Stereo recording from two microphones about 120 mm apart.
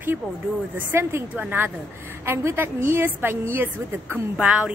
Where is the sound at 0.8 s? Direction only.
20° right (ahead or behind).